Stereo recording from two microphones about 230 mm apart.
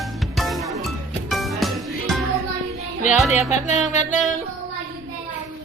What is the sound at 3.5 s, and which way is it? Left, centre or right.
Music, left.